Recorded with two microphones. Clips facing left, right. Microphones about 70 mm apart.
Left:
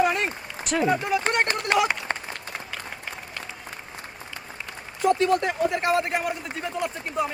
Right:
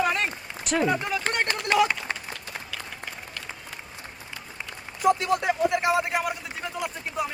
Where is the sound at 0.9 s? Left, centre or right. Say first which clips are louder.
Left 3 dB; left.